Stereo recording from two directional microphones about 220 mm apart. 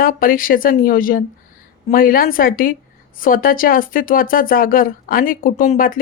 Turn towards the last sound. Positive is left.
turn(degrees=40)  # may be behind; listen again after turning